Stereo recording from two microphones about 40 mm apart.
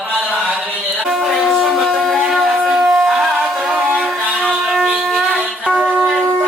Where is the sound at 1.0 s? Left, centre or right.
Centre.